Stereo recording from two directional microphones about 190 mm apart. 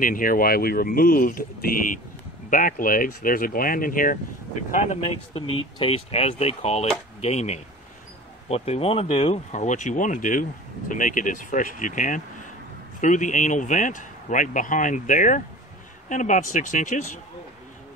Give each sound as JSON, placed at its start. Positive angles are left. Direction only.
{"t": 0.0, "sound": "speech", "side_deg": 45}